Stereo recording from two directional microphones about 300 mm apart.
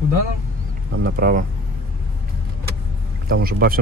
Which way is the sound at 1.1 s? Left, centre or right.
Right.